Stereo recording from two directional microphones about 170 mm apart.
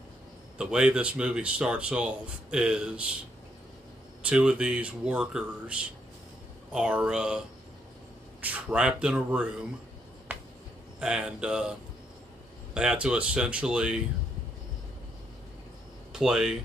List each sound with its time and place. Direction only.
0.6 s speech: 5° right (ahead or behind)
4.2 s speech: 5° right (ahead or behind)
10.3 s finger snapping: 10° right (ahead or behind)
11.0 s speech: 5° right (ahead or behind)
12.7 s speech: 5° right (ahead or behind)
16.1 s speech: centre (ahead or behind)